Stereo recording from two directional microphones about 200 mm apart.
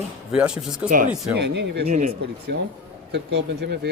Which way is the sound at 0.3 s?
5° right (ahead or behind).